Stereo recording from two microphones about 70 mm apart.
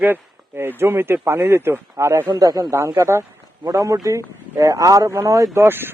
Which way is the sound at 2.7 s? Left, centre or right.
Right.